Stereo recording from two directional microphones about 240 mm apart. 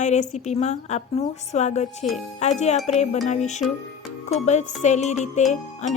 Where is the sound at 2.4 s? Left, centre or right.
Left.